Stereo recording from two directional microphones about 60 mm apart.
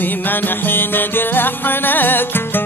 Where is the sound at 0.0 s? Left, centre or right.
Left.